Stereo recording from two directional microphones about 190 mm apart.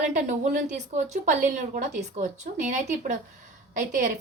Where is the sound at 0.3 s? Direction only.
40° right (ahead or behind).